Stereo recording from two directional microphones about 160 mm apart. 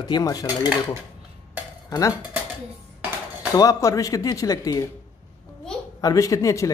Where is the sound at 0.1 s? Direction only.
25° left (ahead or behind).